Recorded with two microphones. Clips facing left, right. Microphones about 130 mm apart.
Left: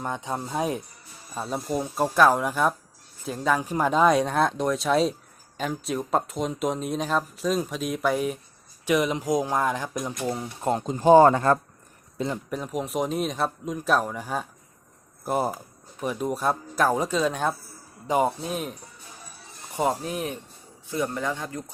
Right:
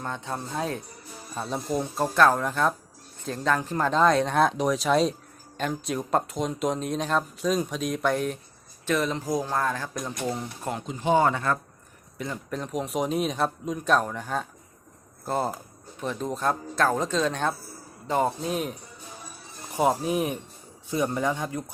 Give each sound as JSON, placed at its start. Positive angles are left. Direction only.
{"t": 0.0, "sound": "speech", "side_deg": 15}
{"t": 1.4, "sound": "speech", "side_deg": 5}
{"t": 4.4, "sound": "speech", "side_deg": 0}
{"t": 10.6, "sound": "speech", "side_deg": 35}
{"t": 12.3, "sound": "speech", "side_deg": 5}